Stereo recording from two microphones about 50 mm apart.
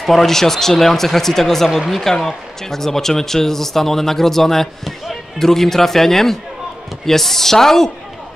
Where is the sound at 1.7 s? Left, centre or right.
Centre.